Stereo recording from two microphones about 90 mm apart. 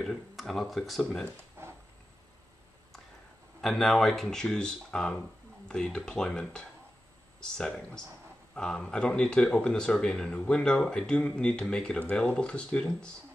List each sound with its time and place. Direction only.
0.0 s speech: centre (ahead or behind)
1.6 s a sound: 25° right (ahead or behind)
3.6 s speech: centre (ahead or behind)